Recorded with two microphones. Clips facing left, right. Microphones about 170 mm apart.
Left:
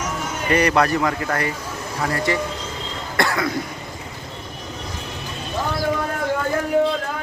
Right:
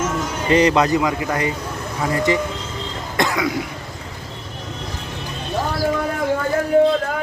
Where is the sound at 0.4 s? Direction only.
20° right (ahead or behind).